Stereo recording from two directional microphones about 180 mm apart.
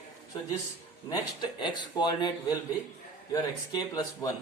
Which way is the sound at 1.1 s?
25° left (ahead or behind).